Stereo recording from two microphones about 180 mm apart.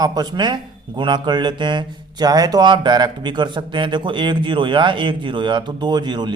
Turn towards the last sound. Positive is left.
turn(degrees=-25)  # may be behind; listen again after turning